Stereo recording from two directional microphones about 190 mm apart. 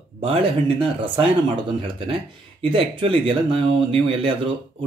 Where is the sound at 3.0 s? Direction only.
25° right (ahead or behind).